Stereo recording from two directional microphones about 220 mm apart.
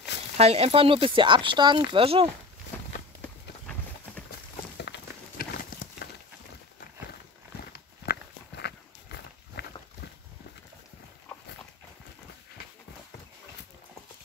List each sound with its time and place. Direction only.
0.4 s speech: 30° right (ahead or behind)
3.2 s clip-clop: 5° left (ahead or behind)
4.7 s horse: 50° left (ahead or behind)
8.0 s walk: 45° left (ahead or behind)